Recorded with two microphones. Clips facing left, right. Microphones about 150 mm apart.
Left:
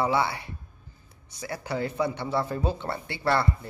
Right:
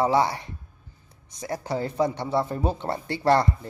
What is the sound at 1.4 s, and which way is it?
Speech, 35° right (ahead or behind).